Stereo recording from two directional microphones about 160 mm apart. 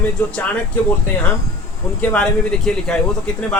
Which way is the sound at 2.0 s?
5° left (ahead or behind).